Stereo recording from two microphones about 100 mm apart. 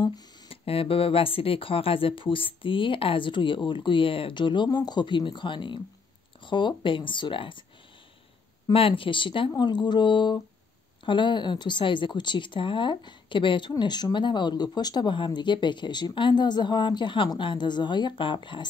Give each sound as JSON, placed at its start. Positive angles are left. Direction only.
{"t": 0.5, "sound": "speech", "side_deg": 70}
{"t": 8.7, "sound": "speech", "side_deg": 65}
{"t": 9.6, "sound": "speech", "side_deg": 50}